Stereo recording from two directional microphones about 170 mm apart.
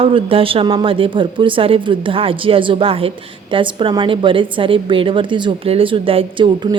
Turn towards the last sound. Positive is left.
turn(degrees=-30)  # may be behind; listen again after turning